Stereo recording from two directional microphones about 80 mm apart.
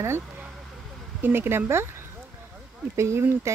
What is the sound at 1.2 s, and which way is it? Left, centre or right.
Speech, right.